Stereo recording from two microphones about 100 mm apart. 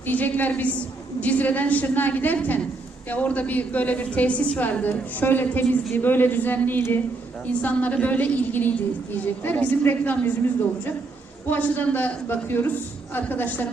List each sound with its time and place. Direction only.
0.1 s a woman's voice: 15° left (ahead or behind)
11.4 s a woman's voice: 20° left (ahead or behind)